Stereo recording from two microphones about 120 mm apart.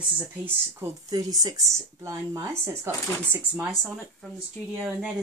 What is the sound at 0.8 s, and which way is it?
Speech, 30° right (ahead or behind).